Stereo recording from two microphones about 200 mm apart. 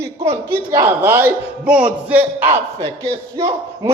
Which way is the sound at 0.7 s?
15° right (ahead or behind).